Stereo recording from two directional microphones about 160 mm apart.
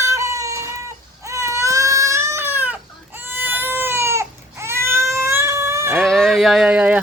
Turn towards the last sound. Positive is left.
turn(degrees=-10)  # may be behind; listen again after turning